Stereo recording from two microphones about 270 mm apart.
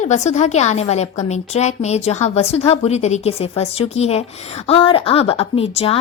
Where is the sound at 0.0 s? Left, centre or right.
Left.